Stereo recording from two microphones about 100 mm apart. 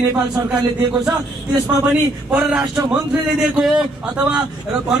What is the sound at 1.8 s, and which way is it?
A man's voice, 20° right (ahead or behind).